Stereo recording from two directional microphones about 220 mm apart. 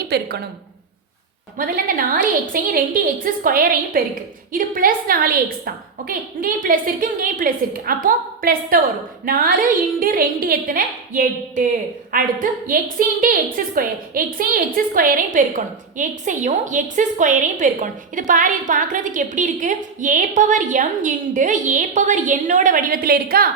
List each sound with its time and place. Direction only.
0.1 s a woman's voice: 45° right (ahead or behind)
1.5 s a woman's voice: 40° right (ahead or behind)